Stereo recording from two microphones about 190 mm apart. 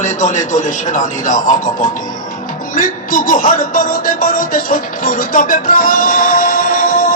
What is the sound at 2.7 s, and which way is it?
Music, 45° left (ahead or behind).